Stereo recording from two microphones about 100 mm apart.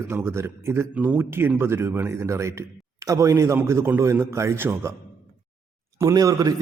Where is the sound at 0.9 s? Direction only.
15° right (ahead or behind).